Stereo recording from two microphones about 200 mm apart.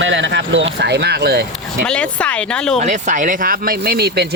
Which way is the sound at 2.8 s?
35° right (ahead or behind).